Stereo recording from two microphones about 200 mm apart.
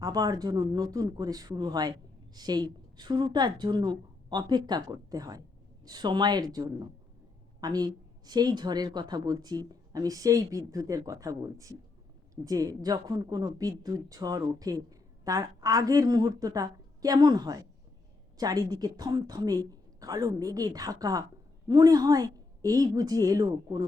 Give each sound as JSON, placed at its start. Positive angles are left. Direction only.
{"t": 0.0, "sound": "speech", "side_deg": -15}